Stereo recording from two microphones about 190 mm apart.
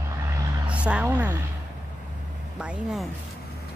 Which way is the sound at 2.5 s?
5° right (ahead or behind).